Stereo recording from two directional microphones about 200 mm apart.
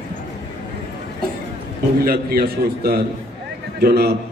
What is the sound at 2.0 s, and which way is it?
A man's voice, 45° right (ahead or behind).